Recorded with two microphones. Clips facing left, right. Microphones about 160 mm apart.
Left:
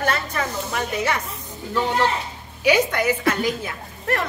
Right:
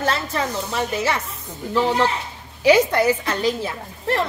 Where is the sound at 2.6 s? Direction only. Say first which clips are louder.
Right 4 dB; 30° right (ahead or behind).